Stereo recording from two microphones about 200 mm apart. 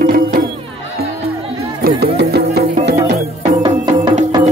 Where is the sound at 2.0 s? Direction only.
55° right (ahead or behind).